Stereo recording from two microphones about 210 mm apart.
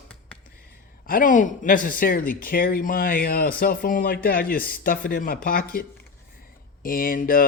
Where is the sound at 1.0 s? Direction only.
40° left (ahead or behind).